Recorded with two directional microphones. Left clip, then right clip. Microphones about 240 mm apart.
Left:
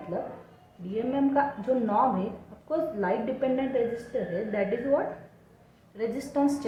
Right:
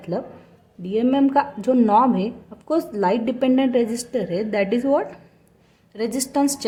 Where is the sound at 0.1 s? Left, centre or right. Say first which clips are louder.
Right 6 dB; right.